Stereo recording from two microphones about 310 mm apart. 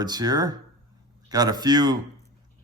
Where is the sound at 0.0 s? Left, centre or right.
Centre.